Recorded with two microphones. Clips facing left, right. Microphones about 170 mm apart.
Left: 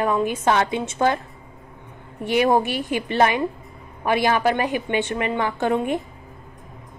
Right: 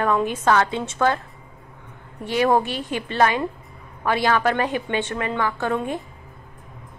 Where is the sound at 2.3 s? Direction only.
15° left (ahead or behind).